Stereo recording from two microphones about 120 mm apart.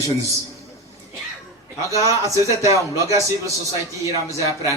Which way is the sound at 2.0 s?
25° right (ahead or behind).